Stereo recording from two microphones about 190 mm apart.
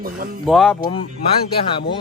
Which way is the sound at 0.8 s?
30° left (ahead or behind).